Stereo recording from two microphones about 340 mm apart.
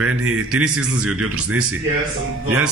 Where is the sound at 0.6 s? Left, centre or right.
Centre.